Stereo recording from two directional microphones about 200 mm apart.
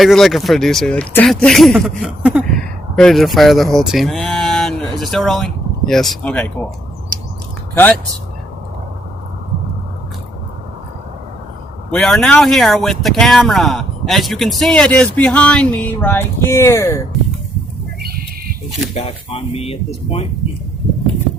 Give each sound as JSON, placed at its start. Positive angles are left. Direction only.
{"t": 0.0, "sound": "speech", "side_deg": 0}
{"t": 11.9, "sound": "speech", "side_deg": 5}
{"t": 18.9, "sound": "speech", "side_deg": 30}